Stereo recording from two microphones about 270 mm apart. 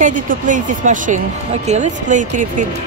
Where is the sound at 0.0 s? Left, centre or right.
Right.